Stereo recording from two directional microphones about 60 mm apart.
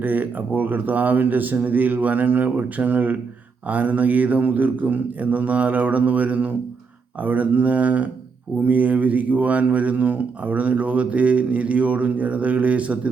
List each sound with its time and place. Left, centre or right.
0.0 s speech: right